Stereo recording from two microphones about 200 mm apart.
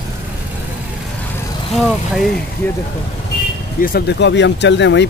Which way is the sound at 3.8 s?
50° left (ahead or behind).